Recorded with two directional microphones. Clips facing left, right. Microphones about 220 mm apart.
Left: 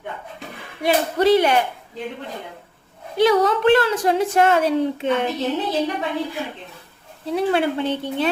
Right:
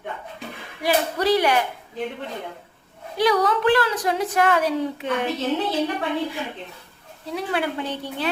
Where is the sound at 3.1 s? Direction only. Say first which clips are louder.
Left 4 dB; 25° left (ahead or behind).